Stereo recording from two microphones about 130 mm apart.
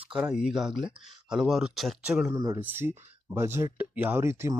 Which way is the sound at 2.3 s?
25° right (ahead or behind).